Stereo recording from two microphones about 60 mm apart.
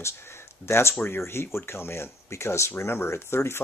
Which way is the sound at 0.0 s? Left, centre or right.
Left.